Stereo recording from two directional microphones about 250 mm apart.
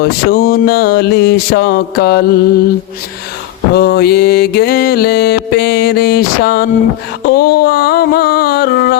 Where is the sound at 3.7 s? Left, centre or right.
Left.